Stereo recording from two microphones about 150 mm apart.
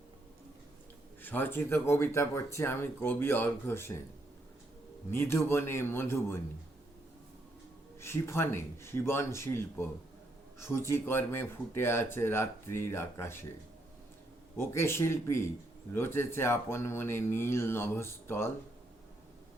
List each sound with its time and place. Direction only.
1.2 s speech: 15° left (ahead or behind)
5.1 s speech: 15° left (ahead or behind)
8.0 s speech: 15° left (ahead or behind)
14.5 s speech: 15° left (ahead or behind)